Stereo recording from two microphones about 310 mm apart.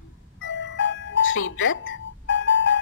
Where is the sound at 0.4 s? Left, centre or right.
Left.